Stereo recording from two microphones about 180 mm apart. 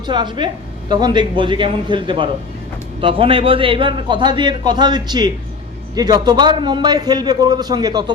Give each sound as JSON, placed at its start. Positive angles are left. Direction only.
{"t": 0.1, "sound": "a man's voice", "side_deg": -25}